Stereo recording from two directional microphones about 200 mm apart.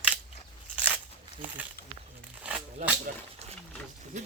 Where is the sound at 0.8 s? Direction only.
10° right (ahead or behind).